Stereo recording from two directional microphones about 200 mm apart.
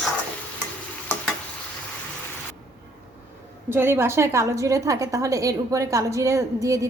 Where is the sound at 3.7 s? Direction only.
10° right (ahead or behind).